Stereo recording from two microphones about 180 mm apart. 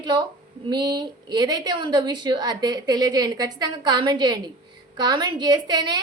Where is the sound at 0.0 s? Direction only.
25° right (ahead or behind).